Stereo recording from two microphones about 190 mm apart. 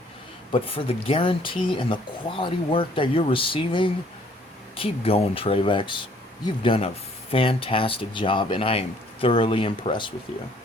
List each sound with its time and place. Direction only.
0.5 s speech: 30° left (ahead or behind)